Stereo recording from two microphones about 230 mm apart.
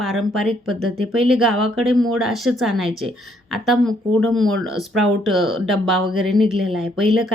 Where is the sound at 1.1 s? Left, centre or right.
Centre.